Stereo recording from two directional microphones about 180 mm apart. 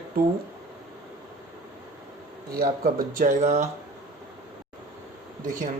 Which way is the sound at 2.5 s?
55° right (ahead or behind).